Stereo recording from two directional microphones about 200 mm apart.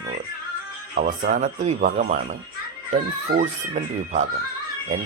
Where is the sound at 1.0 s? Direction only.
40° right (ahead or behind).